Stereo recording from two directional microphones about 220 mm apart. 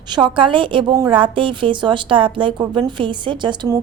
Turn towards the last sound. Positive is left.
turn(degrees=-20)  # may be behind; listen again after turning